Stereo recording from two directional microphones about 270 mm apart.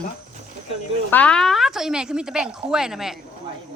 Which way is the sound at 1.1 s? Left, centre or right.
Centre.